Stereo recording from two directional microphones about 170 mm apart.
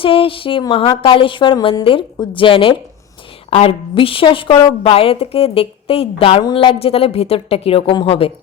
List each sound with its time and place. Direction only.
0.0 s a woman's voice: 30° left (ahead or behind)